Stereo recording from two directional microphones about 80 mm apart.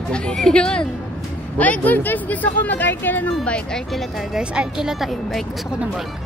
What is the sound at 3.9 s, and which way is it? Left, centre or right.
Speech, centre.